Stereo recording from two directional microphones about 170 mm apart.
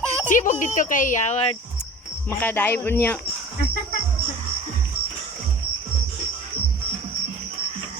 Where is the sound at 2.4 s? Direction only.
10° left (ahead or behind).